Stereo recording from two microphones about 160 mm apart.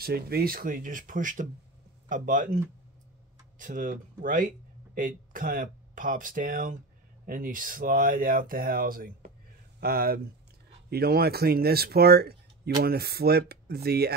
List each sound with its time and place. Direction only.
0.0 s speech: 75° right (ahead or behind)